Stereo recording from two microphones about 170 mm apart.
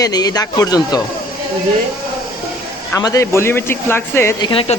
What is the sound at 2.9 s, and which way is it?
Speech, 20° left (ahead or behind).